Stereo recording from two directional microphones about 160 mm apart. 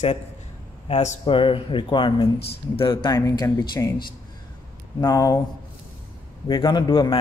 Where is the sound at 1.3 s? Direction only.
35° left (ahead or behind).